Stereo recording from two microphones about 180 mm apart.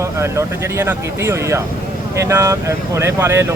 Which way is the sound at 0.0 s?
15° right (ahead or behind).